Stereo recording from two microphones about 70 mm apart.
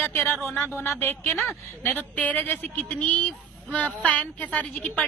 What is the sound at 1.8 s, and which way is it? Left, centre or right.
A woman's voice, left.